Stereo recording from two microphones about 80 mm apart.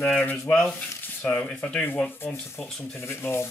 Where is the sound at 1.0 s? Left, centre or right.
Left.